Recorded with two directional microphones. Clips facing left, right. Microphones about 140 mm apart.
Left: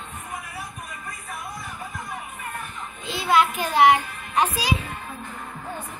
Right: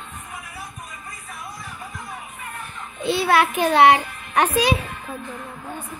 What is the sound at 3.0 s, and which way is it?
A child's voice, 70° right (ahead or behind).